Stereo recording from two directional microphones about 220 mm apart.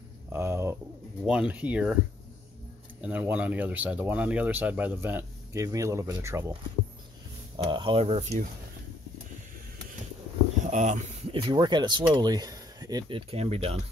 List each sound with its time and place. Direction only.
0.3 s bird: 10° right (ahead or behind)
1.2 s speech: 5° right (ahead or behind)
3.0 s speech: 10° right (ahead or behind)
7.5 s speech: 20° right (ahead or behind)
10.6 s speech: 35° right (ahead or behind)
11.3 s speech: 20° right (ahead or behind)